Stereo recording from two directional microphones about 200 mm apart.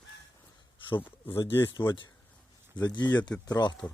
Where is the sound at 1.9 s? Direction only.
25° left (ahead or behind).